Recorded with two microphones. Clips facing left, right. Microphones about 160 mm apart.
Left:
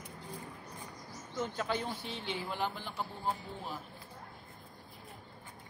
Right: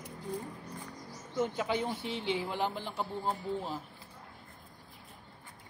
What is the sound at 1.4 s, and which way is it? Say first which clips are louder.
Speech: right 4 dB; 15° right (ahead or behind).